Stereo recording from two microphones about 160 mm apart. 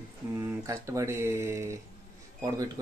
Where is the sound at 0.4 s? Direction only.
20° right (ahead or behind).